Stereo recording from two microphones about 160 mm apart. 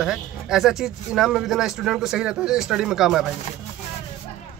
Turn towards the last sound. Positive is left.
turn(degrees=0)  # may be behind; listen again after turning